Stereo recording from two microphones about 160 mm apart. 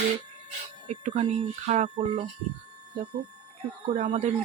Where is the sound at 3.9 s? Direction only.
45° right (ahead or behind).